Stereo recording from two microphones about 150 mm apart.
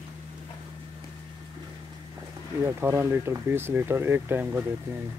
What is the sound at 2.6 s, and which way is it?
Speech, 15° right (ahead or behind).